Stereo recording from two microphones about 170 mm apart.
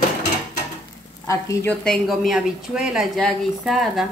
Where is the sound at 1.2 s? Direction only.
20° left (ahead or behind).